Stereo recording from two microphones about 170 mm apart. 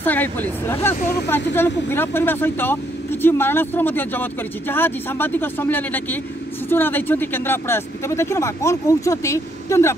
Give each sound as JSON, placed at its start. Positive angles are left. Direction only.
{"t": 0.0, "sound": "speech", "side_deg": 10}